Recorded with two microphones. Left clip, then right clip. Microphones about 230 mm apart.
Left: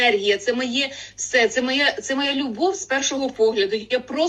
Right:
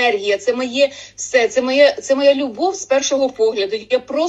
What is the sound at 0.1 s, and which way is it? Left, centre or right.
Speech, centre.